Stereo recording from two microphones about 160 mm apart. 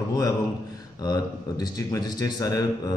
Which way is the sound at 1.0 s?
25° left (ahead or behind).